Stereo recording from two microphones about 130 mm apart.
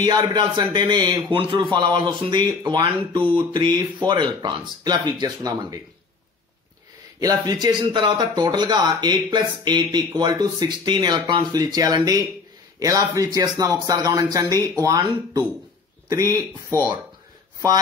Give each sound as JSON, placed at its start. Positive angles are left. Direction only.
{"t": 0.0, "sound": "a man's voice", "side_deg": -30}
{"t": 7.2, "sound": "a man's voice", "side_deg": -30}
{"t": 16.1, "sound": "speech", "side_deg": -25}